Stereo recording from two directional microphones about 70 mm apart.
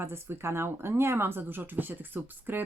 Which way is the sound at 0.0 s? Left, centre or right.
Right.